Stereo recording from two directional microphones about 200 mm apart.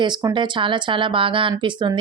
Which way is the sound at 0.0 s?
20° right (ahead or behind).